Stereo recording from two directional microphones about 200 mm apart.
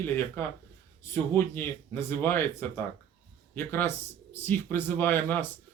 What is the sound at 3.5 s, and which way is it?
Speech, 10° left (ahead or behind).